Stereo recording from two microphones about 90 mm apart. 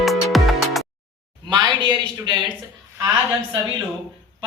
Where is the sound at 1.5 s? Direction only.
60° right (ahead or behind).